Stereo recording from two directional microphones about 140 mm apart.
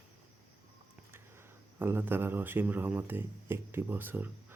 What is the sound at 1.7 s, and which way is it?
Speech, 15° right (ahead or behind).